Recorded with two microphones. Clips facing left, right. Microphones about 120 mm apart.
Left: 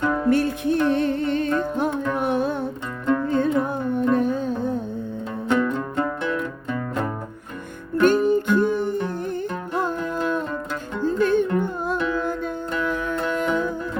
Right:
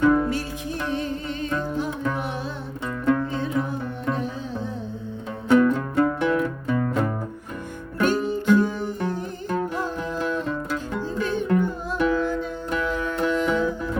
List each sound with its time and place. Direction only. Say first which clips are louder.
0.0 s music: right 5 dB; centre (ahead or behind)
0.3 s music: left 8 dB; 60° left (ahead or behind)
5.5 s music: right 4 dB; 5° right (ahead or behind)
8.0 s music: left 4 dB; 50° left (ahead or behind)
11.0 s music: left 10 dB; 55° left (ahead or behind)